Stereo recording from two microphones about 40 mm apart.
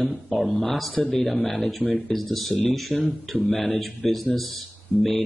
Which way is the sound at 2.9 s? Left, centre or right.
Left.